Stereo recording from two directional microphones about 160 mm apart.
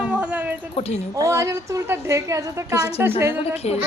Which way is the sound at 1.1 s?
20° right (ahead or behind).